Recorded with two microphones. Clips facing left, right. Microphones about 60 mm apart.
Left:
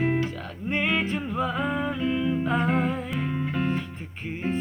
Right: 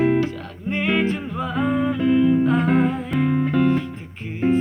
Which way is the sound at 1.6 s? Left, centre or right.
Centre.